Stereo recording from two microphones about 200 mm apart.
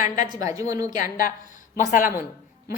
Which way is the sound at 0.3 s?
15° right (ahead or behind).